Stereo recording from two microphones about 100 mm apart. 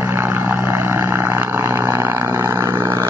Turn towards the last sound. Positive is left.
turn(degrees=-30)  # may be behind; listen again after turning